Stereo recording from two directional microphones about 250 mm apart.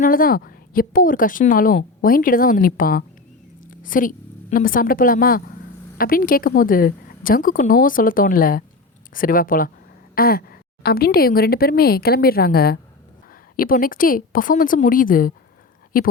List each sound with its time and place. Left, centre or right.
0.0 s a woman's voice: left